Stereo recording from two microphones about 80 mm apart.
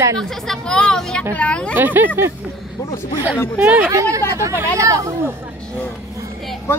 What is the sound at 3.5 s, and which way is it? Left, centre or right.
Speech, right.